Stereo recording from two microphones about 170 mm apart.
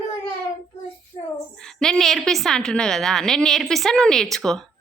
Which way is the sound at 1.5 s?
5° left (ahead or behind).